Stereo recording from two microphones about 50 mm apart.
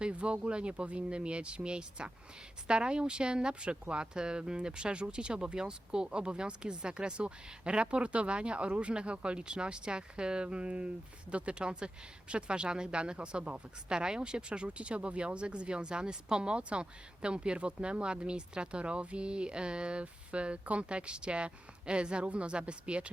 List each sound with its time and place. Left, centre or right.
0.0 s speech: right